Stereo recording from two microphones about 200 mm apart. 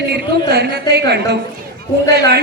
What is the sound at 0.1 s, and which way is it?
Speech, 55° right (ahead or behind).